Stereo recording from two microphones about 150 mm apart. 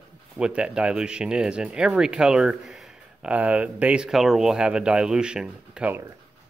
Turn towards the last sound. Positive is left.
turn(degrees=-10)  # may be behind; listen again after turning